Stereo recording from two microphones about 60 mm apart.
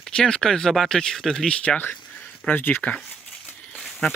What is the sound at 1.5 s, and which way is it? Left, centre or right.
Speech, centre.